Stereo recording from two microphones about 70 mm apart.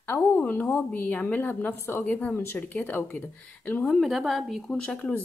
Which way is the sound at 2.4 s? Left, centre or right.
Left.